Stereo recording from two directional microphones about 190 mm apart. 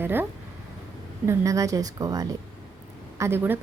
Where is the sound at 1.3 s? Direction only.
15° right (ahead or behind).